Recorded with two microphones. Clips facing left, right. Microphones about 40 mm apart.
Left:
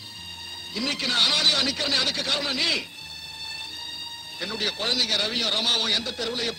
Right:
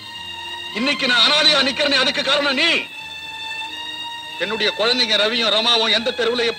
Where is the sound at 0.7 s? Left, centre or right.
Right.